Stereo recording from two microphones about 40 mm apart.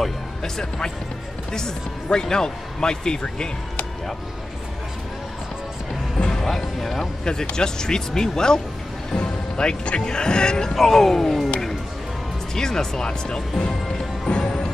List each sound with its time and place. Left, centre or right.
0.4 s speech: centre
6.1 s music: centre
6.4 s speech: centre
7.2 s speech: centre
10.7 s speech: centre
12.5 s speech: centre
14.3 s music: left